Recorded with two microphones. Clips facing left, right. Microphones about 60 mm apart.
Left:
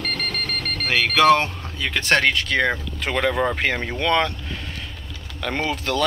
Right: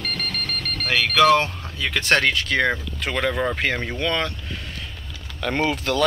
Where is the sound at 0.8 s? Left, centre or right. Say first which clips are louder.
Left 1 dB; left.